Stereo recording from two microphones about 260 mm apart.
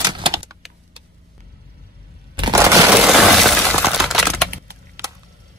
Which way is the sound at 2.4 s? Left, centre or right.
Centre.